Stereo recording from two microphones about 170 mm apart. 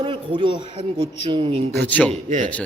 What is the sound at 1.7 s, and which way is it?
Speech, 10° left (ahead or behind).